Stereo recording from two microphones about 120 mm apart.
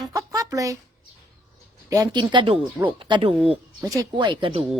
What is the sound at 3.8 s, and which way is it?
Speech, 30° right (ahead or behind).